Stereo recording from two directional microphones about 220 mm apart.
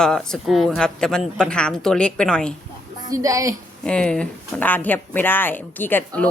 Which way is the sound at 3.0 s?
15° right (ahead or behind).